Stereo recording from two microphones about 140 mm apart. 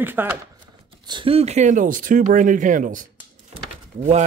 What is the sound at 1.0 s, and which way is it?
Speech, 35° right (ahead or behind).